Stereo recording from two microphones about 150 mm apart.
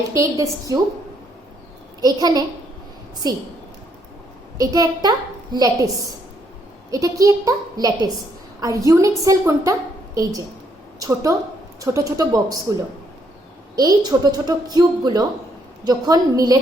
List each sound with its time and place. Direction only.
0.1 s a woman's voice: 20° right (ahead or behind)
2.0 s a woman's voice: 25° right (ahead or behind)
4.5 s a woman's voice: 25° right (ahead or behind)
6.9 s a woman's voice: 20° right (ahead or behind)
11.0 s a woman's voice: 20° right (ahead or behind)
13.7 s a woman's voice: 25° right (ahead or behind)